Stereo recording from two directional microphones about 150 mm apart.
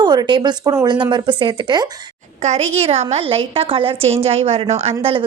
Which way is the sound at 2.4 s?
45° right (ahead or behind).